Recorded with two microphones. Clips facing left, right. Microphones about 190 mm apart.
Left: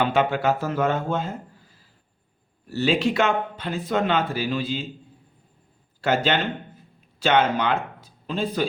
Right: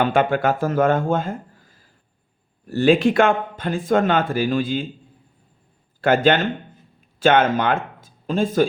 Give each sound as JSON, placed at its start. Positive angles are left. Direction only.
{"t": 0.0, "sound": "a man's voice", "side_deg": -50}
{"t": 6.0, "sound": "a man's voice", "side_deg": -55}